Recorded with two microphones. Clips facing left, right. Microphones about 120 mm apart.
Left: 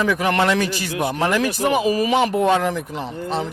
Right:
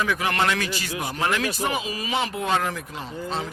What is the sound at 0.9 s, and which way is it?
Speech, 65° left (ahead or behind).